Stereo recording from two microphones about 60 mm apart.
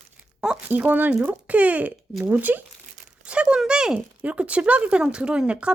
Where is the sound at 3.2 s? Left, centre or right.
Centre.